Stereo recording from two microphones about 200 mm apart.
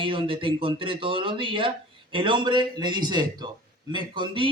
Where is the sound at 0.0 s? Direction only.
25° right (ahead or behind).